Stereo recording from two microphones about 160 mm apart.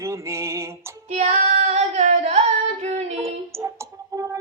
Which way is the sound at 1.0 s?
45° right (ahead or behind).